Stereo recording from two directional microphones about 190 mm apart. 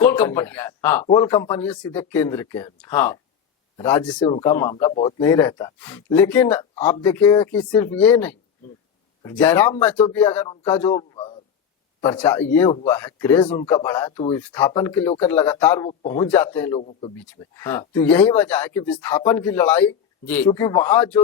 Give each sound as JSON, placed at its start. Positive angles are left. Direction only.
{"t": 0.0, "sound": "speech", "side_deg": 10}
{"t": 4.2, "sound": "speech", "side_deg": 25}
{"t": 4.9, "sound": "speech", "side_deg": 30}
{"t": 5.2, "sound": "speech", "side_deg": 15}
{"t": 10.9, "sound": "a sound", "side_deg": 25}
{"t": 12.1, "sound": "speech", "side_deg": 10}
{"t": 13.4, "sound": "speech", "side_deg": 25}
{"t": 13.7, "sound": "speech", "side_deg": 15}